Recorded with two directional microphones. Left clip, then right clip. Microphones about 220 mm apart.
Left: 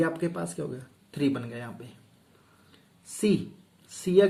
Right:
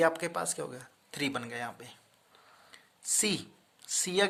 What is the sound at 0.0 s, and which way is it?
Speech, 50° right (ahead or behind).